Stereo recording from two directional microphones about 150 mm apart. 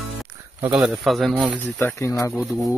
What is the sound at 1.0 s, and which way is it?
Speech, centre (ahead or behind).